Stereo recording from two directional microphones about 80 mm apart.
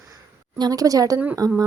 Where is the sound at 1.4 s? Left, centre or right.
Right.